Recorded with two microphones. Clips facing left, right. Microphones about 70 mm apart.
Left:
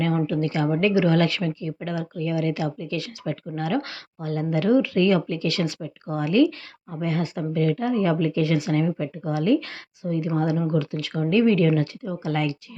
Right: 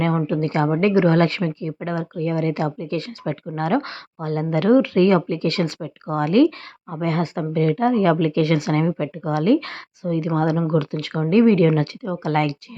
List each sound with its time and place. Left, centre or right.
0.3 s speech: right
4.2 s speech: right
10.7 s speech: right